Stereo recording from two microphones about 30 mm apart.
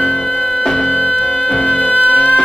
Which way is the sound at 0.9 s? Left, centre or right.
Left.